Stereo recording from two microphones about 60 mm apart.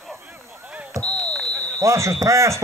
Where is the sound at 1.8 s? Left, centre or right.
Right.